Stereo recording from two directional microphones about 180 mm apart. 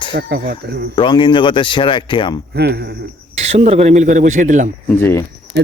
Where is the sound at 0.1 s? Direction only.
65° right (ahead or behind).